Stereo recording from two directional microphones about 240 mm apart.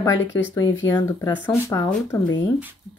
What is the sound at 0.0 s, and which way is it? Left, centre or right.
Speech, centre.